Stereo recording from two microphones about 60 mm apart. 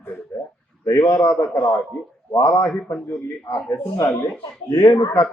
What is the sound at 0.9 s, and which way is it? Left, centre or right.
Speech, left.